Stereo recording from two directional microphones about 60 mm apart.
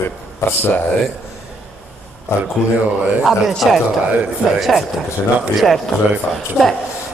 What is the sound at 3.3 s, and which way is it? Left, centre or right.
Speech, centre.